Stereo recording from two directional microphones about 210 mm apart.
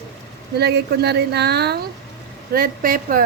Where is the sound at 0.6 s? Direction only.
50° right (ahead or behind).